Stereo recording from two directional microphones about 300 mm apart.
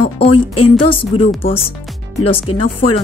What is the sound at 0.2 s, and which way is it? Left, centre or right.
Speech, centre.